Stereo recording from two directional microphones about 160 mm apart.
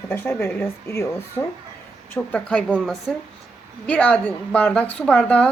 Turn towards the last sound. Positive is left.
turn(degrees=10)  # may be behind; listen again after turning